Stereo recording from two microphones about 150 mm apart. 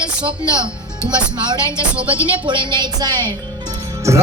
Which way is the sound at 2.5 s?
30° right (ahead or behind).